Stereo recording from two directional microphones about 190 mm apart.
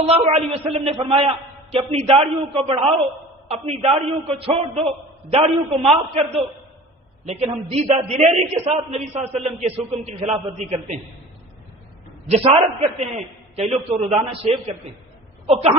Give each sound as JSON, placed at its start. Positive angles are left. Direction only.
{"t": 0.1, "sound": "a man's voice", "side_deg": -30}
{"t": 12.3, "sound": "a man's voice", "side_deg": -30}